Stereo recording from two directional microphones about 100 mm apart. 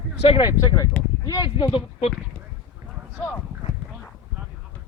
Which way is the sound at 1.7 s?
80° left.